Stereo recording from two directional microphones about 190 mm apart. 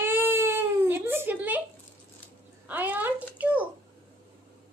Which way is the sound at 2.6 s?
10° right (ahead or behind).